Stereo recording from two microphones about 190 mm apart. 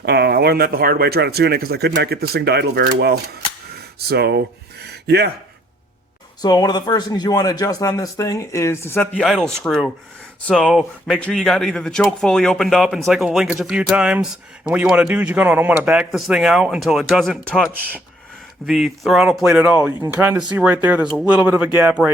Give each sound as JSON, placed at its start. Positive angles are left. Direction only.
{"t": 0.0, "sound": "speech", "side_deg": -60}
{"t": 6.4, "sound": "speech", "side_deg": 20}